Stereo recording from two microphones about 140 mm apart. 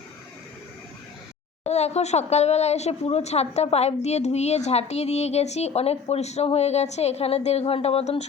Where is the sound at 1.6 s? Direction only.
50° left (ahead or behind).